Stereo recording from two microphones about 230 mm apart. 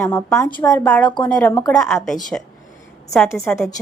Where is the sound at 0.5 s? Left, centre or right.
Centre.